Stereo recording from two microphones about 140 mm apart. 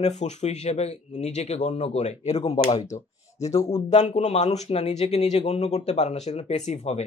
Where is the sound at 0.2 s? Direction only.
55° left (ahead or behind).